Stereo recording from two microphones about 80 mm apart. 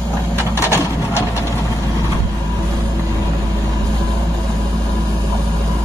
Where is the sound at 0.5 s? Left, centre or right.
Left.